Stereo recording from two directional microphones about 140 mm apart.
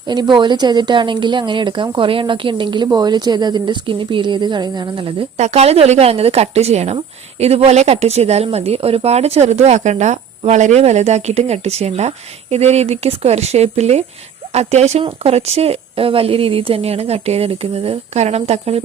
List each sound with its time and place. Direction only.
0.1 s a woman's voice: 30° right (ahead or behind)
5.4 s a woman's voice: 50° right (ahead or behind)